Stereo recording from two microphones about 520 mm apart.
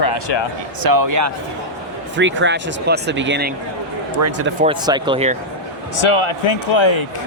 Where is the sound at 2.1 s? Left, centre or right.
Right.